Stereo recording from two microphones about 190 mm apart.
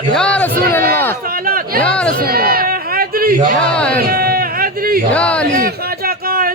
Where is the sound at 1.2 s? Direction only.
50° right (ahead or behind).